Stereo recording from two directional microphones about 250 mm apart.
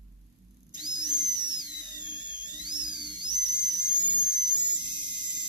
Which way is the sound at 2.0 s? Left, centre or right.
Centre.